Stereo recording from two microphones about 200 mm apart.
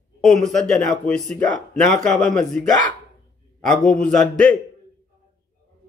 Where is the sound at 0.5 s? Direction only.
5° left (ahead or behind).